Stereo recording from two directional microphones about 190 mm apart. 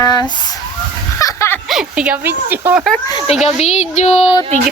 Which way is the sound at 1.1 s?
15° left (ahead or behind).